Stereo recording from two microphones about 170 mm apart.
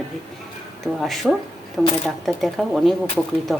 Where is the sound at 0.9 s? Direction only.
Centre (ahead or behind).